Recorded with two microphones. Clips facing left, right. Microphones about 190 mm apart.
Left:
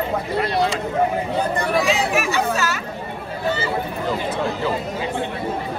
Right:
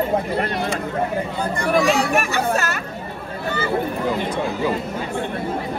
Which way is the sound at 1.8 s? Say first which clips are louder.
Right 1 dB; 55° right (ahead or behind).